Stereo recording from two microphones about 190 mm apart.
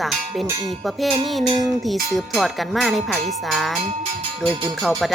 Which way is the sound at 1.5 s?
20° right (ahead or behind).